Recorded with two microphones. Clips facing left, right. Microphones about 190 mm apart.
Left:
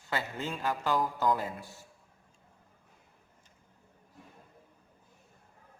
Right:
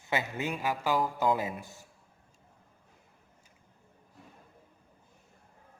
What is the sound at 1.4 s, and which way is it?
Speech, 15° right (ahead or behind).